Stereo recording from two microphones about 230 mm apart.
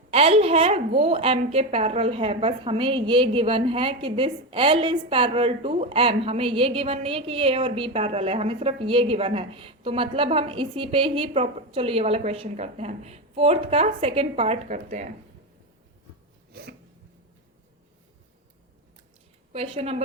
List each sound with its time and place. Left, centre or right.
0.1 s a woman's voice: right
16.5 s a sound: right
19.5 s a woman's voice: right